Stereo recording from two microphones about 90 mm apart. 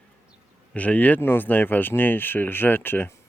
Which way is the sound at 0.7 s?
15° left (ahead or behind).